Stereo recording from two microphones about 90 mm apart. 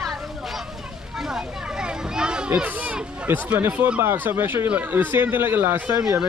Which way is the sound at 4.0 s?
25° right (ahead or behind).